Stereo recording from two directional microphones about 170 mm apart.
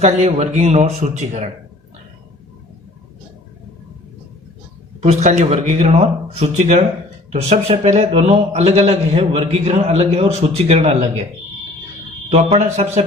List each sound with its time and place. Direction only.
0.0 s a man's voice: 40° right (ahead or behind)
5.0 s a man's voice: 40° right (ahead or behind)
12.3 s a man's voice: 40° right (ahead or behind)